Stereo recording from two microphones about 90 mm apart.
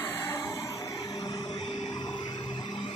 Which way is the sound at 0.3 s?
35° left (ahead or behind).